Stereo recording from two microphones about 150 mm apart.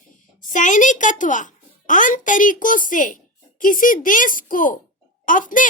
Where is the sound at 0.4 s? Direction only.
60° left (ahead or behind).